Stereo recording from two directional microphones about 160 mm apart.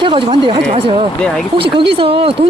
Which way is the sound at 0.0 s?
30° right (ahead or behind).